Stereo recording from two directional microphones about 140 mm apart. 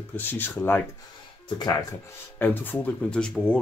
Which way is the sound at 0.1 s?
15° left (ahead or behind).